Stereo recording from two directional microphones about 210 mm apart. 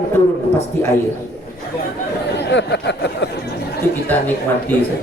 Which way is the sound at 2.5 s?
55° left (ahead or behind).